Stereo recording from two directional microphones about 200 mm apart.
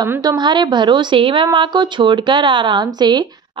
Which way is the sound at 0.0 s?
20° right (ahead or behind).